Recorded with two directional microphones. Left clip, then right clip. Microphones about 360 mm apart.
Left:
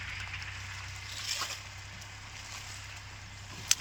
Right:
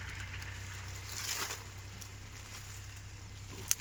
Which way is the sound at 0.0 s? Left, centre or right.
Centre.